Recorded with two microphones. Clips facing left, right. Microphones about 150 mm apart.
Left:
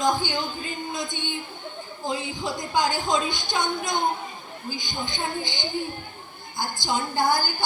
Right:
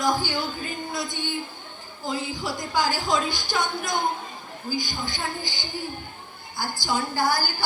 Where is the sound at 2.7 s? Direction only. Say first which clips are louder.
Left 1 dB; 20° left (ahead or behind).